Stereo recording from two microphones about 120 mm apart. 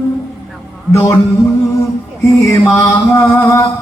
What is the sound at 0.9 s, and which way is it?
Music, 25° left (ahead or behind).